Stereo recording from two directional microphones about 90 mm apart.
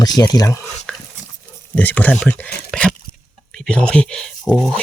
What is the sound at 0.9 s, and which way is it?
Dog, 15° left (ahead or behind).